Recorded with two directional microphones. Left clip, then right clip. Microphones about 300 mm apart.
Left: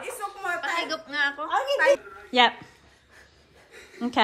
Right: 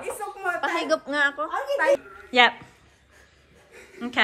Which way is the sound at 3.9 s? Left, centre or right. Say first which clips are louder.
Even; centre.